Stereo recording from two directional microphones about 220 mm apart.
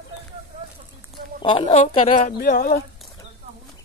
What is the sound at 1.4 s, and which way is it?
Speech, 25° left (ahead or behind).